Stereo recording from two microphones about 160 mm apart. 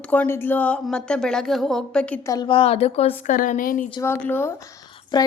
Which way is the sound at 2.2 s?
25° left (ahead or behind).